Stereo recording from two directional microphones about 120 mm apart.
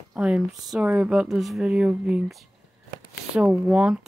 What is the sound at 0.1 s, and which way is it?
Speech, 5° right (ahead or behind).